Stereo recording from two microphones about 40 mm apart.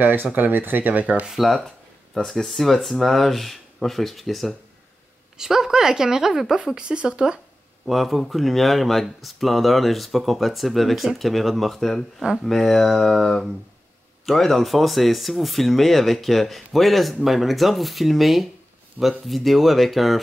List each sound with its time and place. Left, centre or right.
0.0 s speech: right
1.4 s speech: centre
5.4 s speech: centre
7.8 s speech: centre